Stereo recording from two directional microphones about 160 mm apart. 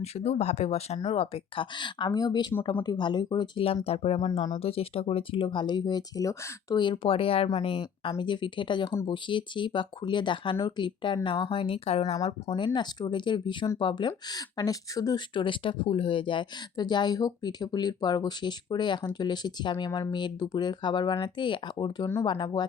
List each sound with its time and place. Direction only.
0.0 s speech: 40° left (ahead or behind)
12.5 s speech: 30° left (ahead or behind)